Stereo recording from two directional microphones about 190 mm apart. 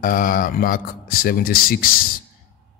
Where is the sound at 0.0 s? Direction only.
45° left (ahead or behind).